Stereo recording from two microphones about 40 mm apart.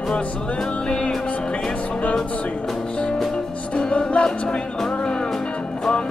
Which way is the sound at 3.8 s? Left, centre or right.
Left.